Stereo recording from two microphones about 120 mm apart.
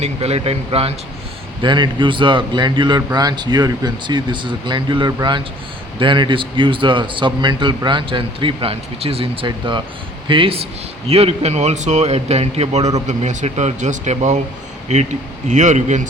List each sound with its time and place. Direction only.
0.0 s a man's voice: 60° right (ahead or behind)
1.6 s a man's voice: 40° right (ahead or behind)
11.1 s a man's voice: 60° right (ahead or behind)
13.1 s speech: 75° right (ahead or behind)